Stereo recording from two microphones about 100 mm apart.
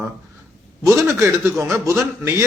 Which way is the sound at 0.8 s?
30° right (ahead or behind).